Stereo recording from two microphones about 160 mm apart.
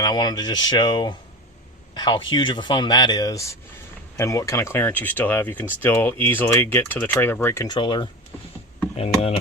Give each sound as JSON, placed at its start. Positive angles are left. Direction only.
{"t": 0.0, "sound": "speech", "side_deg": 25}
{"t": 7.7, "sound": "speech", "side_deg": 30}